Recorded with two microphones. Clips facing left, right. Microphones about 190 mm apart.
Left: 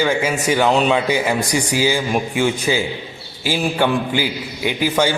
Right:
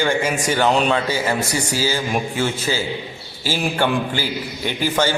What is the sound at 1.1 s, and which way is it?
A man's voice, 15° left (ahead or behind).